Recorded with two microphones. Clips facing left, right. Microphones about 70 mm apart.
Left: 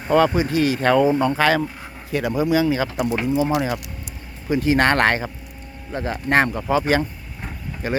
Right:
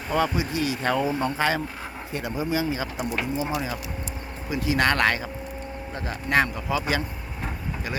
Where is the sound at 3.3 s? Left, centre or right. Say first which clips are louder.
Left 7 dB; left.